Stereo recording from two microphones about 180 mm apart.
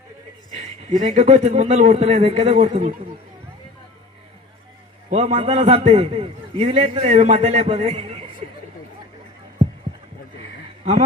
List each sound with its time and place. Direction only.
0.5 s a man's voice: 40° right (ahead or behind)
5.0 s a man's voice: 35° right (ahead or behind)